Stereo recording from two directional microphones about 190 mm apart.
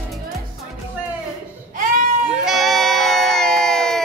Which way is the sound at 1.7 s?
45° right (ahead or behind).